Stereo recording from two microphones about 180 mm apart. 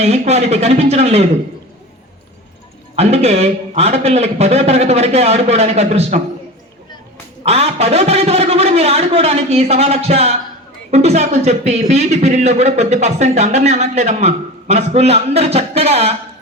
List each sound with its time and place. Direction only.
0.0 s speech: 35° right (ahead or behind)
2.9 s speech: 35° right (ahead or behind)
7.4 s speech: 35° right (ahead or behind)